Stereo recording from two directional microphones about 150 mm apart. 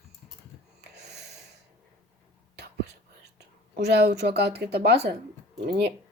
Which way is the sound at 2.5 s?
90° right.